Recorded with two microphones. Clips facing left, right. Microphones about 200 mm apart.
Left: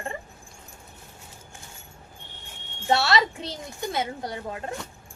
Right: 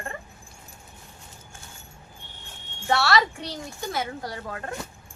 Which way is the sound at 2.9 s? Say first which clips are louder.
Even; 20° left (ahead or behind).